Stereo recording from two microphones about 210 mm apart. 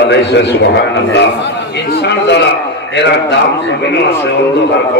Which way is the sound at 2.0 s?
55° left (ahead or behind).